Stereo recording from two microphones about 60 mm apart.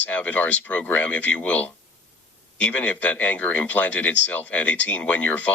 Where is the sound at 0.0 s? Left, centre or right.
Left.